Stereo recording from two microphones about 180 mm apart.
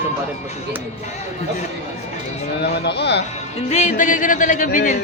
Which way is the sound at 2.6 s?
70° left (ahead or behind).